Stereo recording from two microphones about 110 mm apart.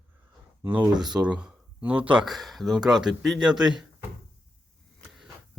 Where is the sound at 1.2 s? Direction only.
10° right (ahead or behind).